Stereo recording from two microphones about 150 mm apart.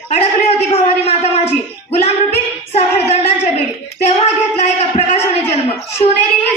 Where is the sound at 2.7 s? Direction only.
45° left (ahead or behind).